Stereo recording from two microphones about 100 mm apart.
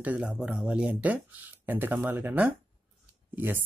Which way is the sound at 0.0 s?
15° right (ahead or behind).